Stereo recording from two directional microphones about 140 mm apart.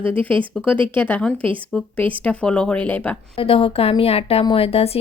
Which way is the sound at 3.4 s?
40° left (ahead or behind).